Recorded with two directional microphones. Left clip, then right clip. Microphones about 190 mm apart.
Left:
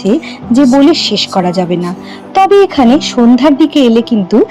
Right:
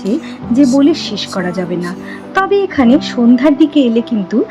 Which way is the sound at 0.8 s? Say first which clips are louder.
Left 5 dB; 10° left (ahead or behind).